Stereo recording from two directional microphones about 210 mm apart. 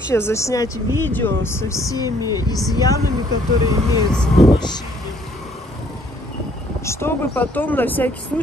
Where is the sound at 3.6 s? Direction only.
15° right (ahead or behind).